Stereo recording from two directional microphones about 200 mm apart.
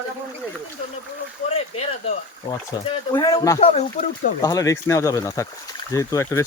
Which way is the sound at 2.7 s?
15° left (ahead or behind).